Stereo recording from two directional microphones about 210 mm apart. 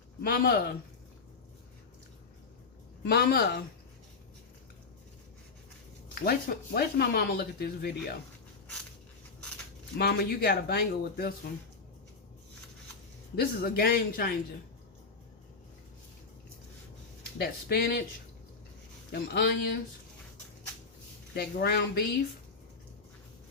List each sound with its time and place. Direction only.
0.2 s speech: 45° left (ahead or behind)
3.0 s speech: 55° left (ahead or behind)
6.1 s speech: 45° left (ahead or behind)
10.0 s speech: 50° left (ahead or behind)
13.3 s speech: 45° left (ahead or behind)
17.3 s speech: 50° left (ahead or behind)
19.1 s speech: 50° left (ahead or behind)
21.3 s speech: 50° left (ahead or behind)